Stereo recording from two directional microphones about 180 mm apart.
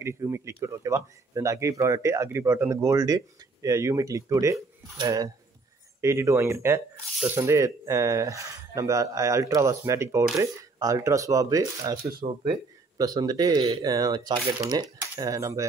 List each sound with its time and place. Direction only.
0.0 s speech: 15° right (ahead or behind)